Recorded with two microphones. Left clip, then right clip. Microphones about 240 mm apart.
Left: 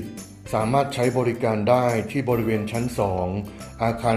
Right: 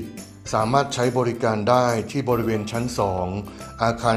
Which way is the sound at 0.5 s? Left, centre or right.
Right.